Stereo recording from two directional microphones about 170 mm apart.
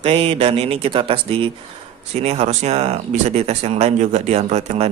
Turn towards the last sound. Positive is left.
turn(degrees=-40)  # may be behind; listen again after turning